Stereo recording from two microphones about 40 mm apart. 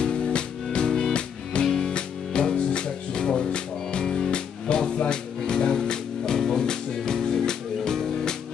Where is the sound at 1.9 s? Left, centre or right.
Left.